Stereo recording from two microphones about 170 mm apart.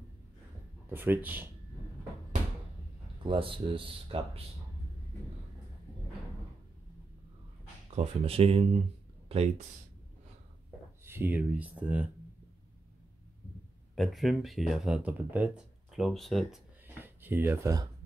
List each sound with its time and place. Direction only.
0.8 s speech: 10° right (ahead or behind)
3.3 s speech: 30° right (ahead or behind)
7.9 s speech: 35° right (ahead or behind)
11.1 s speech: 10° right (ahead or behind)
13.9 s speech: centre (ahead or behind)
16.8 s a sound: 10° right (ahead or behind)